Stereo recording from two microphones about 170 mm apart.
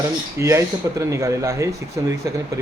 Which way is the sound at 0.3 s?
15° right (ahead or behind).